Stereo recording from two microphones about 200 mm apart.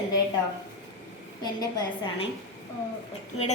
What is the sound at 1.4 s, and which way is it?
Speech, 20° left (ahead or behind).